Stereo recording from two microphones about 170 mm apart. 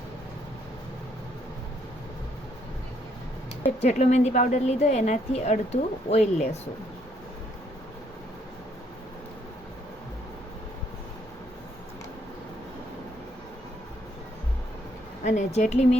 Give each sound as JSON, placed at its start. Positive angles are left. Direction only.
{"t": 3.8, "sound": "a woman's voice", "side_deg": 40}
{"t": 15.2, "sound": "speech", "side_deg": 45}